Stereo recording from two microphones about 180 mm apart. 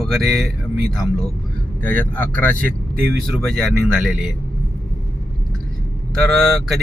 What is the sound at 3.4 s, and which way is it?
Speech, centre (ahead or behind).